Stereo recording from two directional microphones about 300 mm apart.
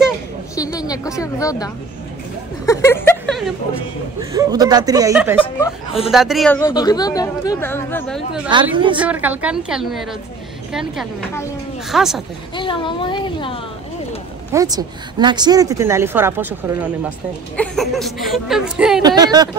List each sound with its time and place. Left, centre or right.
0.7 s speech: centre
2.6 s a sound: centre
4.2 s speech: centre
5.4 s speech: centre
6.0 s speech: centre
8.5 s speech: centre
8.9 s speech: centre
12.5 s speech: centre
14.5 s speech: centre
19.0 s speech: centre